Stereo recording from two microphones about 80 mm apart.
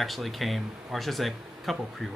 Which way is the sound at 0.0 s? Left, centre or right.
Centre.